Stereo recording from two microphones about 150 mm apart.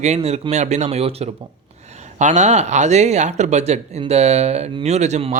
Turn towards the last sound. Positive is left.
turn(degrees=-45)  # may be behind; listen again after turning